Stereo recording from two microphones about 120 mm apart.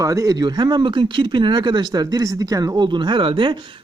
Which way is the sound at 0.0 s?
25° right (ahead or behind).